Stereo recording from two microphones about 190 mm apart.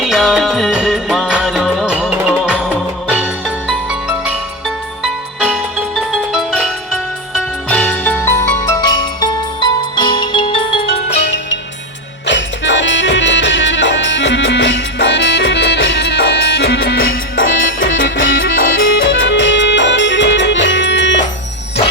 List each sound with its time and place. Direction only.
0.0 s music: centre (ahead or behind)
5.0 s music: 5° right (ahead or behind); by 10.8 s 25° left (ahead or behind)
12.2 s music: 70° left (ahead or behind)
17.1 s music: 90° left
18.4 s music: 45° left (ahead or behind)
18.7 s music: 90° left; by 21.2 s 70° left (ahead or behind)